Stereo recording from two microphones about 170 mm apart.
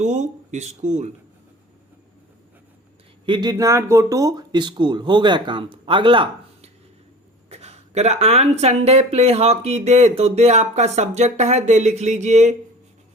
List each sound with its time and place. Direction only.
0.0 s speech: 45° right (ahead or behind)
3.2 s speech: 25° right (ahead or behind); by 12.5 s 45° right (ahead or behind)